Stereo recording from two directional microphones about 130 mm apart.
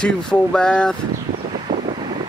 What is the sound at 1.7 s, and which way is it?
Wind noise, 35° right (ahead or behind).